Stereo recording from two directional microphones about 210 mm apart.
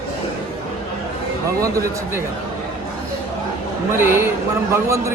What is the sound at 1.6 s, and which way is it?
Speech, 15° right (ahead or behind).